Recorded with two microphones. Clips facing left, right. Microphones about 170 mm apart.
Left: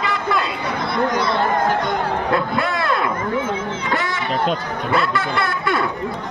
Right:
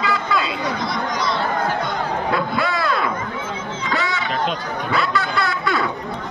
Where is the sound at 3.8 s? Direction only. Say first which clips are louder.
Right 2 dB; 55° left (ahead or behind).